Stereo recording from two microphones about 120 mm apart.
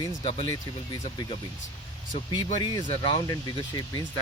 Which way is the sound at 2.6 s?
45° left (ahead or behind).